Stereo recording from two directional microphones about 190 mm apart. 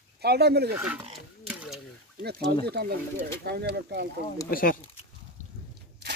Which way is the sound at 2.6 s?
55° right (ahead or behind).